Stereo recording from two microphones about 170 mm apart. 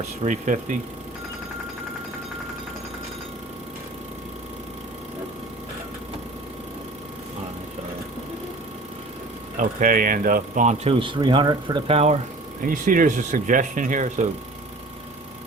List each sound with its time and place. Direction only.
0.3 s speech: 45° right (ahead or behind)
9.6 s speech: 55° right (ahead or behind)
11.0 s speech: 30° right (ahead or behind)
12.6 s speech: 50° right (ahead or behind)